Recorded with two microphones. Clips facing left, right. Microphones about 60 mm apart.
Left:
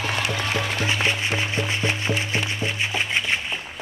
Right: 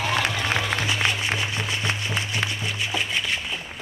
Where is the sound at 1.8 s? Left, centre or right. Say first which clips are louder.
Left 3 dB; left.